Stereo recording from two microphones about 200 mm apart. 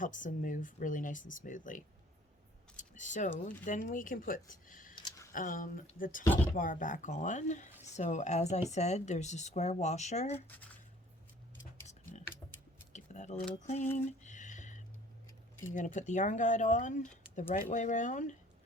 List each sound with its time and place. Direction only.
0.0 s a woman's voice: 40° left (ahead or behind)
4.9 s a sound: 20° left (ahead or behind)
5.3 s speech: 40° left (ahead or behind)
6.2 s speech: 10° left (ahead or behind)
6.5 s a woman's voice: 40° left (ahead or behind)
11.9 s a sound: 35° left (ahead or behind)
12.9 s keys jangling: 35° left (ahead or behind)
13.6 s a woman's voice: 35° left (ahead or behind)
13.9 s a sound: 35° left (ahead or behind)
15.7 s a woman's voice: 40° left (ahead or behind)